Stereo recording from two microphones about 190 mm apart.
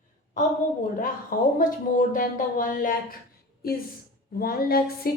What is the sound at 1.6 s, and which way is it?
A woman's voice, 45° left (ahead or behind).